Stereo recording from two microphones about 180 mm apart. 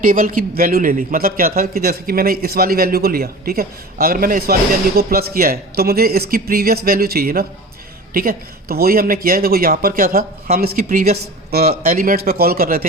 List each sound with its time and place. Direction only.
0.0 s speech: 50° right (ahead or behind)